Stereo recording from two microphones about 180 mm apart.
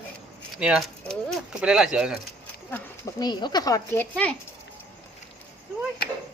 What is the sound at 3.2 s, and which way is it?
Speech, 25° left (ahead or behind).